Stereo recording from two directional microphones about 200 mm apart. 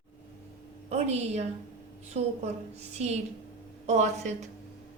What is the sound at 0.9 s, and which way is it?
A woman's voice, 35° right (ahead or behind).